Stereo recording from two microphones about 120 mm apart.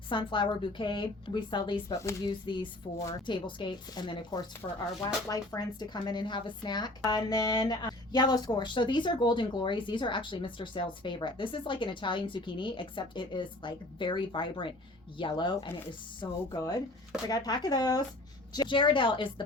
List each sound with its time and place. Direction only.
0.1 s speech: 45° left (ahead or behind)
1.9 s speech: 25° left (ahead or behind)
2.5 s a woman's voice: 40° left (ahead or behind)